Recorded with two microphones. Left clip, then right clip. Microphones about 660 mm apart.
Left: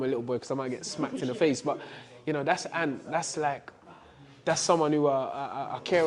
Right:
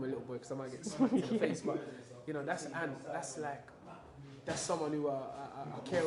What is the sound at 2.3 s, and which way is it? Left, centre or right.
Speech, left.